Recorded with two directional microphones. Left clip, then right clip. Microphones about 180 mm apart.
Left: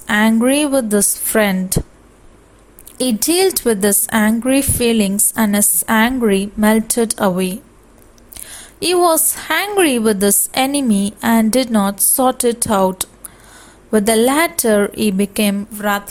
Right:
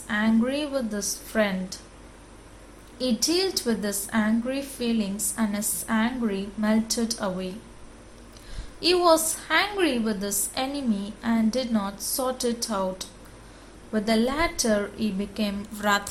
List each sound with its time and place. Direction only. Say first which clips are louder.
0.1 s a woman's voice: left 11 dB; 55° left (ahead or behind)
3.0 s a woman's voice: left 10 dB; 55° left (ahead or behind)
15.7 s a sound: left 5 dB; 35° left (ahead or behind)